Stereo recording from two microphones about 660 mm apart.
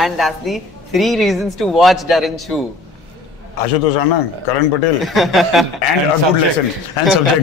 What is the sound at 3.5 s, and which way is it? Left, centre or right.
A man's voice, left.